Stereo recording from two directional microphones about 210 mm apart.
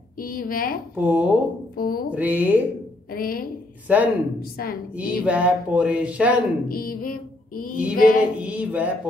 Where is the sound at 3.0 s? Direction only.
45° left (ahead or behind).